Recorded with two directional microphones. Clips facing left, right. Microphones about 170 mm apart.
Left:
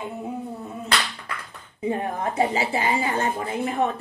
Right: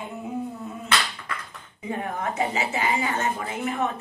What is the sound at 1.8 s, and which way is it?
A woman's voice, 30° left (ahead or behind).